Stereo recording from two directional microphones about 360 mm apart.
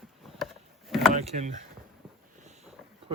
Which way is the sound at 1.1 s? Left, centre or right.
Centre.